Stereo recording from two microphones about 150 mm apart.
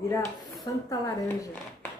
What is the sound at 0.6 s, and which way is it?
Speech, 20° left (ahead or behind).